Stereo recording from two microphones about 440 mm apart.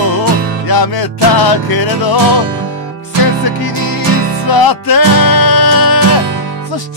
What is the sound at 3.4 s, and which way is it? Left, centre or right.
Music, left.